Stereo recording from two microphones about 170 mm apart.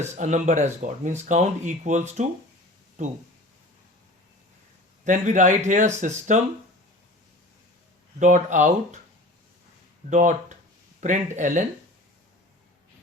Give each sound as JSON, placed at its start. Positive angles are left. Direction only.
{"t": 0.0, "sound": "speech", "side_deg": -45}
{"t": 5.0, "sound": "speech", "side_deg": -45}
{"t": 8.2, "sound": "speech", "side_deg": -45}
{"t": 10.1, "sound": "speech", "side_deg": -45}